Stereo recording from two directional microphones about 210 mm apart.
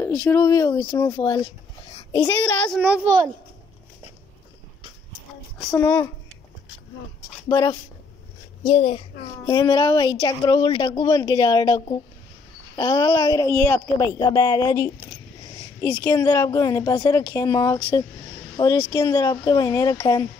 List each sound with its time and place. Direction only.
0.0 s a woman's voice: 10° left (ahead or behind)
2.2 s speech: 5° left (ahead or behind)
2.8 s a child's voice: 5° right (ahead or behind)
5.7 s speech: 10° left (ahead or behind)
7.4 s speech: 15° left (ahead or behind)
8.6 s a child's voice: 30° left (ahead or behind)